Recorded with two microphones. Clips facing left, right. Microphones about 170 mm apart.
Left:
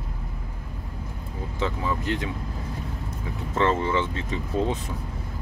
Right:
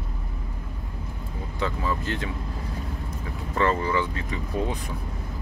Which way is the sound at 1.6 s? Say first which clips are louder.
Even; 20° left (ahead or behind).